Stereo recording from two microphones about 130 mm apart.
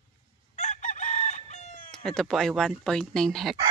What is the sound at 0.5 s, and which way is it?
Chicken, 55° left (ahead or behind).